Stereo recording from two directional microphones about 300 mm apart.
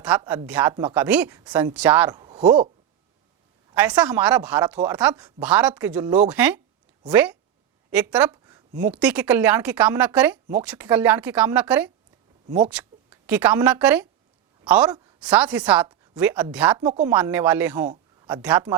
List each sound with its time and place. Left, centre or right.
0.0 s speech: centre
3.8 s speech: centre
7.9 s a sound: centre
8.8 s a woman's voice: centre